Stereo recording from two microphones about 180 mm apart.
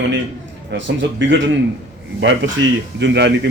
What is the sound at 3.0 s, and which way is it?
Speech, 75° right (ahead or behind).